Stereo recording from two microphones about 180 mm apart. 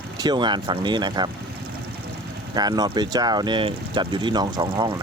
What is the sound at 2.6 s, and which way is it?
Speech, 20° right (ahead or behind).